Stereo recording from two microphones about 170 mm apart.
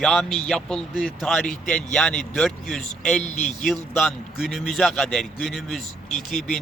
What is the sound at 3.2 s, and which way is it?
Speech, 45° left (ahead or behind).